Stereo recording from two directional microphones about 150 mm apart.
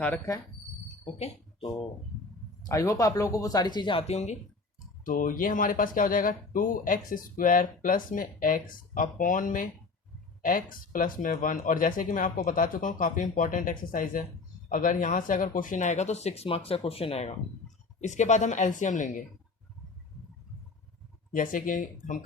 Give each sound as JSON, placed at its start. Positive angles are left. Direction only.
{"t": 1.0, "sound": "speech", "side_deg": 35}
{"t": 2.8, "sound": "speech", "side_deg": 20}
{"t": 5.0, "sound": "speech", "side_deg": 65}
{"t": 21.3, "sound": "speech", "side_deg": 60}